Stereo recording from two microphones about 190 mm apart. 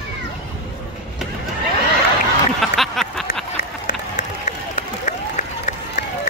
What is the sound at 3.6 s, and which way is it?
Applause, 45° left (ahead or behind).